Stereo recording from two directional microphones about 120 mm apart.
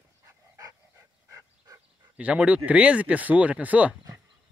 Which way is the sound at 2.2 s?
10° right (ahead or behind).